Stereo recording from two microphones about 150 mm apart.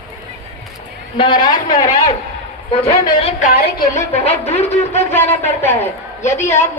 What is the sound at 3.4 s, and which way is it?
Speech, 90° left.